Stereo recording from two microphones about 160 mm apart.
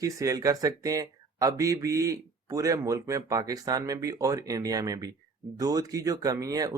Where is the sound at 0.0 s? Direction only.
20° right (ahead or behind).